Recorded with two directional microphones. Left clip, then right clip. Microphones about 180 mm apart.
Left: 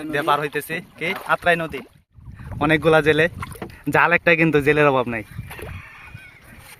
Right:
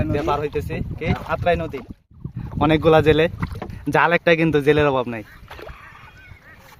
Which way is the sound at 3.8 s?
5° left (ahead or behind).